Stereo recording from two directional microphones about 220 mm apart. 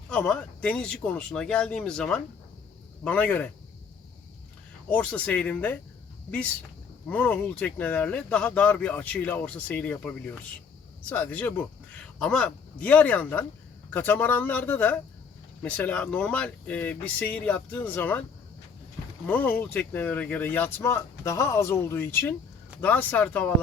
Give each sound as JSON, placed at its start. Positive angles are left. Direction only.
{"t": 0.1, "sound": "speech", "side_deg": 5}
{"t": 4.9, "sound": "speech", "side_deg": 5}
{"t": 7.1, "sound": "speech", "side_deg": 5}
{"t": 11.1, "sound": "speech", "side_deg": 10}
{"t": 19.3, "sound": "speech", "side_deg": 5}